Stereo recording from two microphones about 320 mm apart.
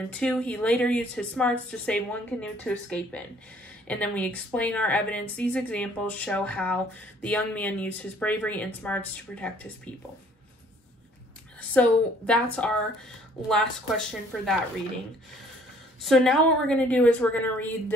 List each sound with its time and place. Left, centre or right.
0.1 s a woman's voice: centre
11.7 s a woman's voice: centre
16.0 s a woman's voice: centre